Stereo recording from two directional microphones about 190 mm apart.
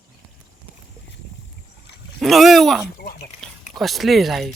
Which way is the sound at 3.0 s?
50° left (ahead or behind).